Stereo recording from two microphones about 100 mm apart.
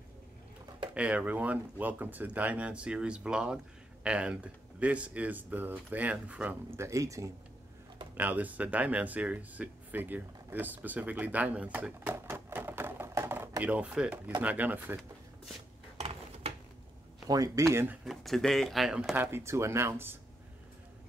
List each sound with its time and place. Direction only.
0.9 s speech: 10° right (ahead or behind)
6.8 s speech: 30° right (ahead or behind)
8.1 s speech: 15° right (ahead or behind)
12.3 s a sound: 25° right (ahead or behind)
13.6 s speech: 15° right (ahead or behind)
17.3 s speech: 35° right (ahead or behind)
18.0 s speech: centre (ahead or behind)
19.3 s speech: 30° right (ahead or behind)